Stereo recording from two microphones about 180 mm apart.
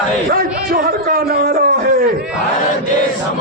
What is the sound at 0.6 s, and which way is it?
Speech, 55° right (ahead or behind).